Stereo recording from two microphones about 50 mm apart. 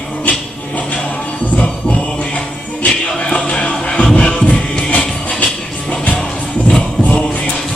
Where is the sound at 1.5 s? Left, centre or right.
Left.